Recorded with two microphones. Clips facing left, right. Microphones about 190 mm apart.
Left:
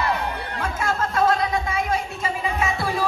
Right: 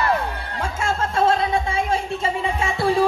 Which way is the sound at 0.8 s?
30° right (ahead or behind).